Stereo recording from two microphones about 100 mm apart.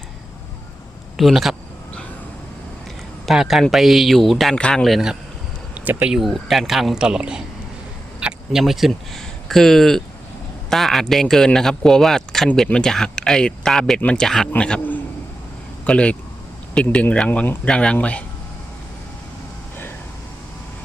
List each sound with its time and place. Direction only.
1.1 s speech: centre (ahead or behind)
3.2 s a man's voice: 5° right (ahead or behind)
5.7 s speech: 15° right (ahead or behind)
6.1 s a man's voice: centre (ahead or behind)